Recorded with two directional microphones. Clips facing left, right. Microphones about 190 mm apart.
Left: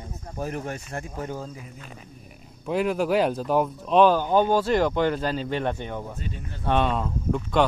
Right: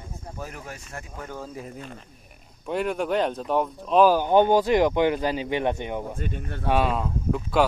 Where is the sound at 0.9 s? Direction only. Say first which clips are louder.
Left 3 dB; 30° left (ahead or behind).